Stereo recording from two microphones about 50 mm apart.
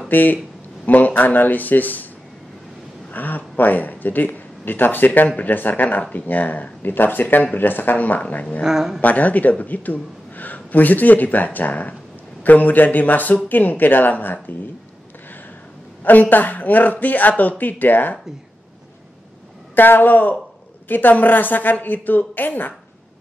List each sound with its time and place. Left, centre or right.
0.1 s speech: left
3.1 s speech: left
8.6 s a woman's voice: centre
9.0 s speech: left
16.0 s speech: left
19.7 s speech: left